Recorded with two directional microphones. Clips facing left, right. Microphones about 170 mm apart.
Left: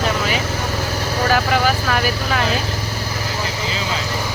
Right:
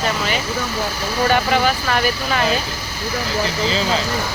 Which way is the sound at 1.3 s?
Centre (ahead or behind).